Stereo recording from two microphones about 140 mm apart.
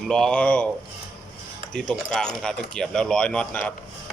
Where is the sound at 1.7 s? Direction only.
5° left (ahead or behind).